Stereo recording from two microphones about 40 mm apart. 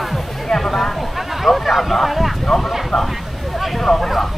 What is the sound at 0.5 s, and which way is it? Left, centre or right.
Speech, centre.